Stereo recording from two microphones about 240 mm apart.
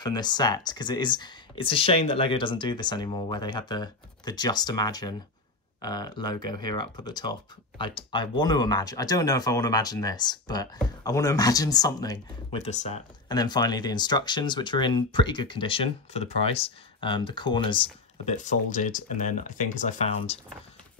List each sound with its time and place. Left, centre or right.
0.0 s speech: centre
12.5 s speech: left
13.3 s speech: centre